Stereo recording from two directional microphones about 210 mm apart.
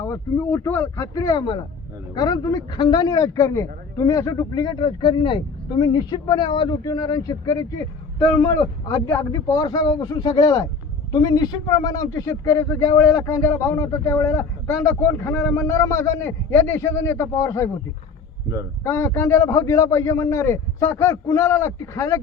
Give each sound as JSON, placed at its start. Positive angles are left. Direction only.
{"t": 0.0, "sound": "a man's voice", "side_deg": 15}
{"t": 18.8, "sound": "a man's voice", "side_deg": 15}